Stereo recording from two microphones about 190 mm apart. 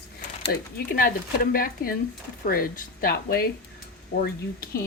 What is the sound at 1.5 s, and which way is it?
Speech, 50° left (ahead or behind).